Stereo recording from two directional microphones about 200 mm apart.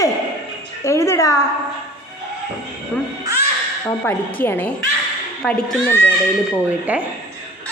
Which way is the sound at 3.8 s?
10° left (ahead or behind).